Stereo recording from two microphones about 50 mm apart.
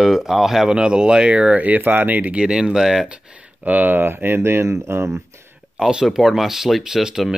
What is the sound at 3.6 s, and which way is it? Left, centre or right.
Speech, right.